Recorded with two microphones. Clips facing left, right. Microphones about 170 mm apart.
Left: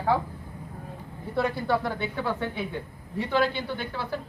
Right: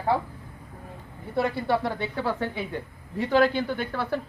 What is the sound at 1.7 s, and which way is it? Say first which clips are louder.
Speech: right 1 dB; 30° right (ahead or behind).